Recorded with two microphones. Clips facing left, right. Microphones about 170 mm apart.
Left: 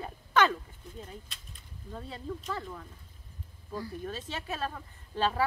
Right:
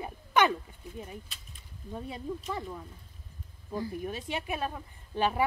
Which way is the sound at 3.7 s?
20° right (ahead or behind).